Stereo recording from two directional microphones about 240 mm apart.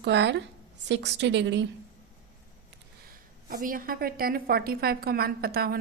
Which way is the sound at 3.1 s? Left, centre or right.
Right.